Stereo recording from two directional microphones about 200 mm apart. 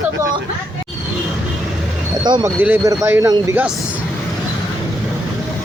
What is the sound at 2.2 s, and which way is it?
Speech, 20° right (ahead or behind).